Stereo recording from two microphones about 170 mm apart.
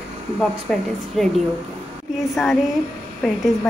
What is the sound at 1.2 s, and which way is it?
A woman's voice, centre (ahead or behind).